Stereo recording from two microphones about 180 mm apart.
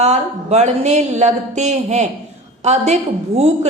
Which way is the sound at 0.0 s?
40° right (ahead or behind).